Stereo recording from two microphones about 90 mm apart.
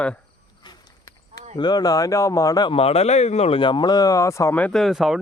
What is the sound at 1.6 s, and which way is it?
Speech, 50° left (ahead or behind).